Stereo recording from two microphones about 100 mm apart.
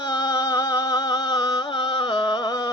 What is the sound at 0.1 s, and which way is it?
Music, 45° left (ahead or behind).